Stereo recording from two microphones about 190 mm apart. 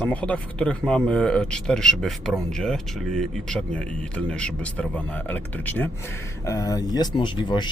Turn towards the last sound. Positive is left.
turn(degrees=25)  # may be behind; listen again after turning